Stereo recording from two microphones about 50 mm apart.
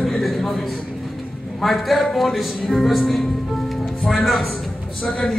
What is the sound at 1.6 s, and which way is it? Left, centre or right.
A man's voice, centre.